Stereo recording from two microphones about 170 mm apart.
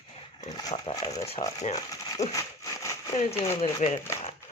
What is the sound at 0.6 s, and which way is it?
Speech, 25° left (ahead or behind).